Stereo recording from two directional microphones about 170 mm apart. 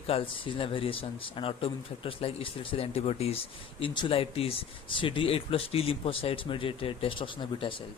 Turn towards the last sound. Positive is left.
turn(degrees=30)  # may be behind; listen again after turning